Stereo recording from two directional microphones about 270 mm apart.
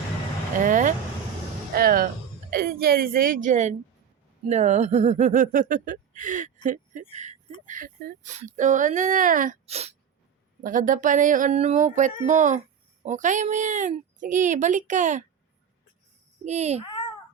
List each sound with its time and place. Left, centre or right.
0.6 s speech: right
16.4 s speech: right